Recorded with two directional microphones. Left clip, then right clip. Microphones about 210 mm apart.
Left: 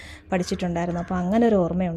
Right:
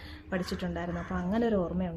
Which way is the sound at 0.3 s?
35° left (ahead or behind).